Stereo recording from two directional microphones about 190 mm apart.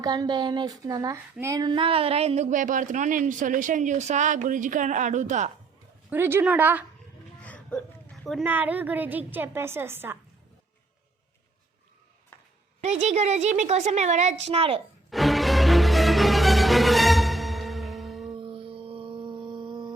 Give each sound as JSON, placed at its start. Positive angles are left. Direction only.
{"t": 0.0, "sound": "speech", "side_deg": -20}
{"t": 6.1, "sound": "a woman's voice", "side_deg": -10}
{"t": 7.3, "sound": "a sound", "side_deg": 5}
{"t": 8.4, "sound": "a woman's voice", "side_deg": -10}
{"t": 12.8, "sound": "speech", "side_deg": -35}
{"t": 15.1, "sound": "music", "side_deg": 0}
{"t": 18.3, "sound": "music", "side_deg": -30}